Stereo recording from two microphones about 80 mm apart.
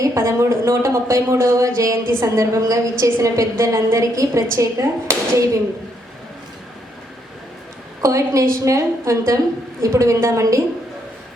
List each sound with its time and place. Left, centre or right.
0.0 s speech: right
8.0 s speech: right